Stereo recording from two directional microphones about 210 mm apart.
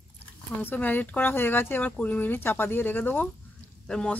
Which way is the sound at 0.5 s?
10° left (ahead or behind).